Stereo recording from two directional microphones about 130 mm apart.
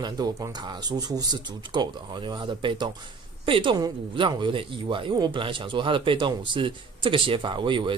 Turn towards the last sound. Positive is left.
turn(degrees=-40)  # may be behind; listen again after turning